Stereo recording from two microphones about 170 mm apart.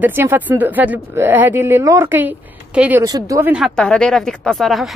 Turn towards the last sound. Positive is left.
turn(degrees=0)  # may be behind; listen again after turning